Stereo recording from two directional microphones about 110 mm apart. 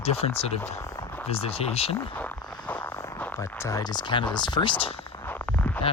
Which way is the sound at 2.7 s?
15° left (ahead or behind).